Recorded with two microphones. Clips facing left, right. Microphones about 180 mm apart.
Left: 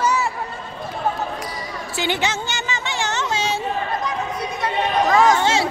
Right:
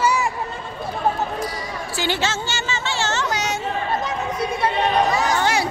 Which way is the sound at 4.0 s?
25° right (ahead or behind).